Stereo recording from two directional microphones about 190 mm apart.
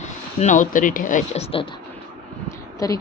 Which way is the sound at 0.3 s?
40° left (ahead or behind).